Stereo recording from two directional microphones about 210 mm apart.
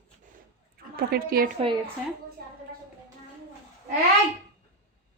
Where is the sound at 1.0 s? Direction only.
45° right (ahead or behind).